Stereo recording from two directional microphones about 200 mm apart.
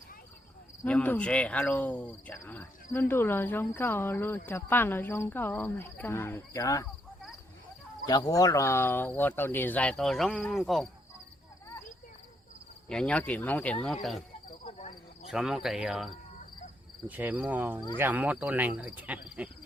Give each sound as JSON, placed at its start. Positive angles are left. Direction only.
{"t": 0.9, "sound": "speech", "side_deg": 5}
{"t": 8.0, "sound": "speech", "side_deg": 20}
{"t": 12.9, "sound": "speech", "side_deg": 5}
{"t": 14.6, "sound": "cricket", "side_deg": 35}
{"t": 15.3, "sound": "speech", "side_deg": 0}
{"t": 17.1, "sound": "cricket", "side_deg": -10}